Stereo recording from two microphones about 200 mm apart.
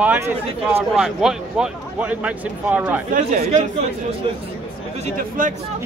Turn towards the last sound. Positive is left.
turn(degrees=-45)  # may be behind; listen again after turning